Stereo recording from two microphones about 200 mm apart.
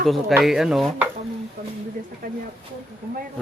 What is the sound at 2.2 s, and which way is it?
Speech, 45° right (ahead or behind).